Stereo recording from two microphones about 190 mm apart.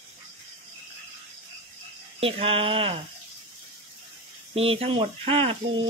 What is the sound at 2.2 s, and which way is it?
Speech, 30° right (ahead or behind).